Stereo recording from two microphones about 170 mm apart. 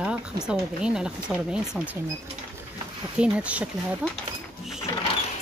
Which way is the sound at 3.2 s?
5° right (ahead or behind).